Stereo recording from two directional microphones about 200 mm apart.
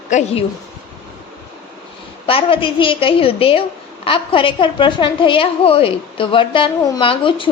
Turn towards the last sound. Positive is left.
turn(degrees=25)  # may be behind; listen again after turning